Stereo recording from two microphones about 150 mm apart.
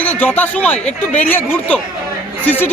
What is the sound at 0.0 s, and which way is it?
Speech, 10° left (ahead or behind).